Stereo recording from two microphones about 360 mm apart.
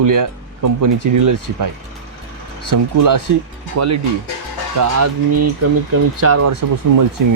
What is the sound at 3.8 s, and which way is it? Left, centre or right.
Speech, right.